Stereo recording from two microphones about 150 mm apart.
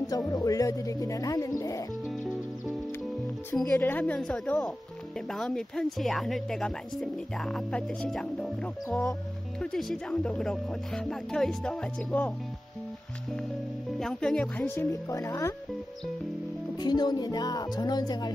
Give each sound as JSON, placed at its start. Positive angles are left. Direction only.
{"t": 0.3, "sound": "speech", "side_deg": 25}
{"t": 3.5, "sound": "speech", "side_deg": 10}
{"t": 9.6, "sound": "speech", "side_deg": 5}
{"t": 13.9, "sound": "speech", "side_deg": 5}
{"t": 16.7, "sound": "speech", "side_deg": 25}